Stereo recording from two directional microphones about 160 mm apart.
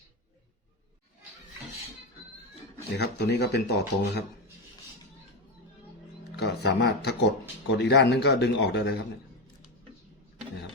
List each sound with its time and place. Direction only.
2.9 s speech: 90° left
6.3 s speech: 90° left